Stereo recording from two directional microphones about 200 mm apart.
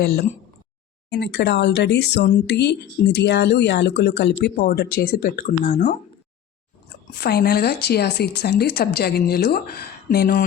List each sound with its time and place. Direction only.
1.1 s speech: 55° left (ahead or behind); by 6.0 s 40° left (ahead or behind)
7.2 s speech: 55° left (ahead or behind)